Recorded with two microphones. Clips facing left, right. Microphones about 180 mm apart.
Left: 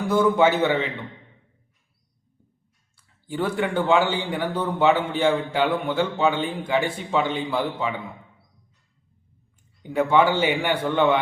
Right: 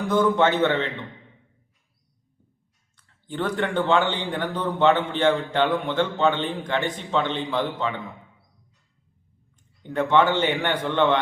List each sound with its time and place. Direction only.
0.0 s a man's voice: 10° left (ahead or behind)
2.9 s a man's voice: 10° left (ahead or behind)
9.8 s a man's voice: 10° left (ahead or behind)